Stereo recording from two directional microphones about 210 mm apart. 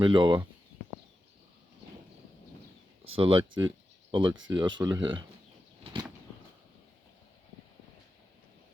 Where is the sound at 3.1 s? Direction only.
25° right (ahead or behind).